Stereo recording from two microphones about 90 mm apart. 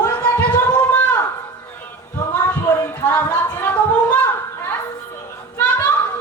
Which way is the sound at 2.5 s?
25° left (ahead or behind).